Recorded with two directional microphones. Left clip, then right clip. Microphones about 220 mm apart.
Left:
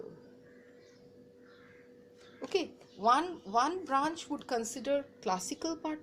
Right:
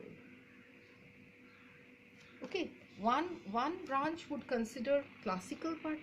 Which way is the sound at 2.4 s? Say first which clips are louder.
Left 7 dB; 30° left (ahead or behind).